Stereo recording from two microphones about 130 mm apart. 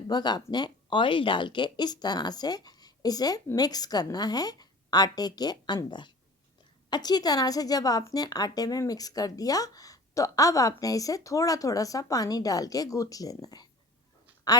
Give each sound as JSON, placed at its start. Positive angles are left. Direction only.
{"t": 0.1, "sound": "a woman's voice", "side_deg": 35}